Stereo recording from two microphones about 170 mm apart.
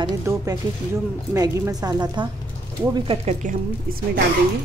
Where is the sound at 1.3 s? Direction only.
20° right (ahead or behind).